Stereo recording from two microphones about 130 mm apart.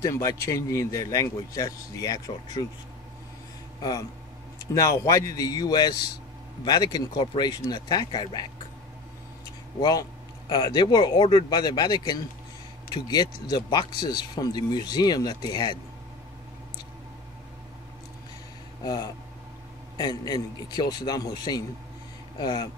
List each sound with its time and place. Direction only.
0.0 s a man's voice: 25° left (ahead or behind)
4.7 s a man's voice: 25° left (ahead or behind)
9.8 s speech: 30° left (ahead or behind)
18.9 s a man's voice: 30° left (ahead or behind)